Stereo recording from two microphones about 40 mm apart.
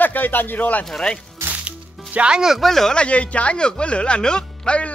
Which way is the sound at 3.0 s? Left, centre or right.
Left.